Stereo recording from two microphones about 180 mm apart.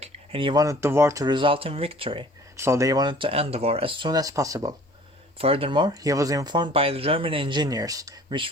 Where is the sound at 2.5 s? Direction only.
15° right (ahead or behind).